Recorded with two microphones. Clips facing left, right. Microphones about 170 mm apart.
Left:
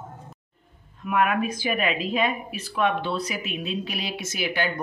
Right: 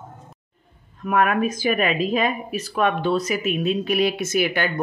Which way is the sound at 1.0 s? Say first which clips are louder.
Right 3 dB; 45° right (ahead or behind).